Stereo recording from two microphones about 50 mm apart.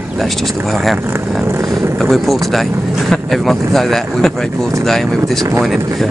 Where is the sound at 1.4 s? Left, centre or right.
Right.